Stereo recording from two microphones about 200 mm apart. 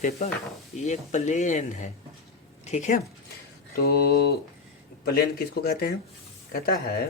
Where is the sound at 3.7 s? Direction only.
50° left (ahead or behind).